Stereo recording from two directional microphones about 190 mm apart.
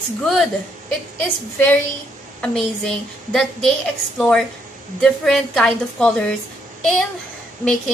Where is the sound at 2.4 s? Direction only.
5° left (ahead or behind).